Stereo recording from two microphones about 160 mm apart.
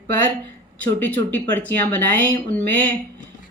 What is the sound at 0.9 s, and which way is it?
Speech, 10° left (ahead or behind).